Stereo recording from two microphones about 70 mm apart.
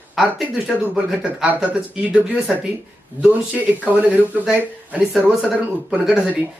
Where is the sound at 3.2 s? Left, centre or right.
Right.